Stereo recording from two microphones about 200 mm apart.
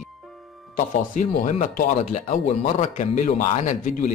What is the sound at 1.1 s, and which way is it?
Speech, 40° left (ahead or behind).